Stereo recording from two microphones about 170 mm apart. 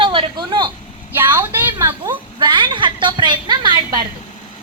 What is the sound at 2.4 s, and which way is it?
A woman's voice, 25° right (ahead or behind).